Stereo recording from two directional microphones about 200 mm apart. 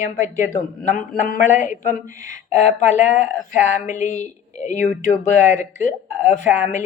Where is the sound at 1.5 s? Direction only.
40° left (ahead or behind).